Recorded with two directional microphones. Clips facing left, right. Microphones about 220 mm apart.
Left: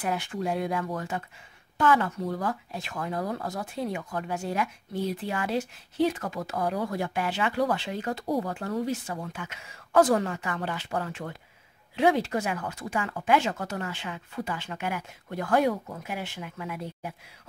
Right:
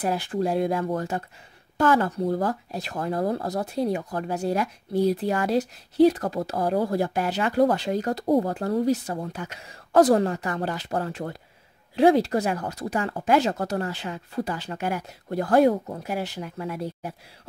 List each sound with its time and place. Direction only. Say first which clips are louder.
0.0 s speech: right 5 dB; 35° right (ahead or behind)